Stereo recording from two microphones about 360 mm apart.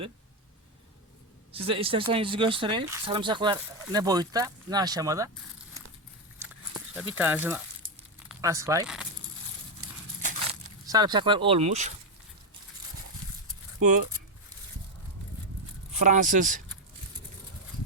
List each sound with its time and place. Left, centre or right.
1.5 s speech: centre
6.4 s a sound: centre
8.3 s speech: centre
10.2 s speech: centre
16.0 s speech: right